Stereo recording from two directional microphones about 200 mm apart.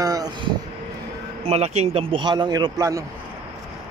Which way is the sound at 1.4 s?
30° right (ahead or behind).